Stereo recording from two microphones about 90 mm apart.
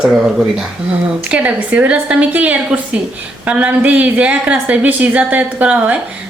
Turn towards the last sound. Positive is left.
turn(degrees=-15)  # may be behind; listen again after turning